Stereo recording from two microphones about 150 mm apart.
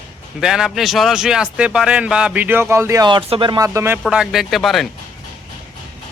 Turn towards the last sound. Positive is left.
turn(degrees=0)  # may be behind; listen again after turning